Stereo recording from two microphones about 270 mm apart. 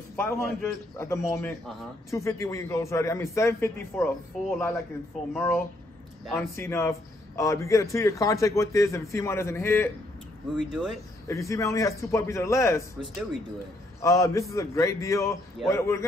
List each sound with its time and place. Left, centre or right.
0.1 s a man's voice: centre
10.7 s speech: centre
11.2 s a man's voice: centre
13.0 s speech: centre
14.0 s a man's voice: centre